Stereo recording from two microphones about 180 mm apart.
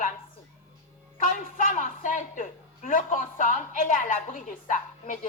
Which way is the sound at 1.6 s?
45° left (ahead or behind).